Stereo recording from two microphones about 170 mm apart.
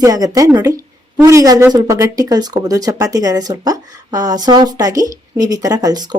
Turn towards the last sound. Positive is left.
turn(degrees=-20)  # may be behind; listen again after turning